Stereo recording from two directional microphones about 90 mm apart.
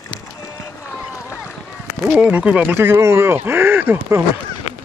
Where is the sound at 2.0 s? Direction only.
15° right (ahead or behind).